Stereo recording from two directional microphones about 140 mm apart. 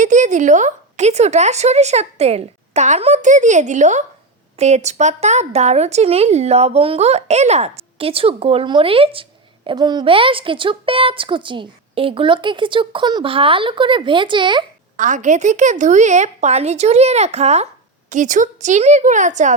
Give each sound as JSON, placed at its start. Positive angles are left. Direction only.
{"t": 0.0, "sound": "a woman's voice", "side_deg": -60}
{"t": 9.6, "sound": "a woman's voice", "side_deg": -30}
{"t": 14.9, "sound": "a woman's voice", "side_deg": -65}
{"t": 18.1, "sound": "a woman's voice", "side_deg": -65}